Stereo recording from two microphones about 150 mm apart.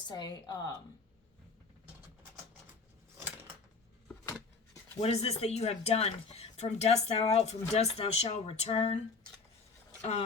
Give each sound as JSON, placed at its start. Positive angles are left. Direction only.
{"t": 0.0, "sound": "a woman's voice", "side_deg": 30}
{"t": 4.9, "sound": "speech", "side_deg": 45}
{"t": 10.0, "sound": "speech", "side_deg": 45}